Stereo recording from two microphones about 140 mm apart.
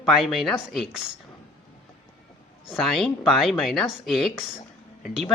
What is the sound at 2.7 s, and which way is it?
Speech, centre (ahead or behind).